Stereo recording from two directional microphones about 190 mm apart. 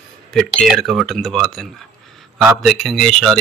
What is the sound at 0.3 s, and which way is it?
Speech, centre (ahead or behind).